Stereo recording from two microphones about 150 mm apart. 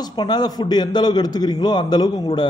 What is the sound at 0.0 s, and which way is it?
A man's voice, 30° left (ahead or behind).